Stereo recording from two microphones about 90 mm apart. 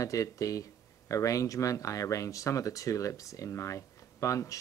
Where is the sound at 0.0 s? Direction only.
40° left (ahead or behind).